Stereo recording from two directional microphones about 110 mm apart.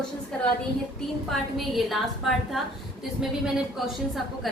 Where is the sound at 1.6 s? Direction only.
Centre (ahead or behind).